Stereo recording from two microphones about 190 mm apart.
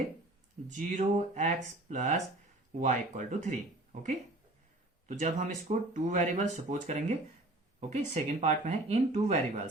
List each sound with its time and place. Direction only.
0.8 s speech: 40° right (ahead or behind)
5.0 s speech: 35° right (ahead or behind)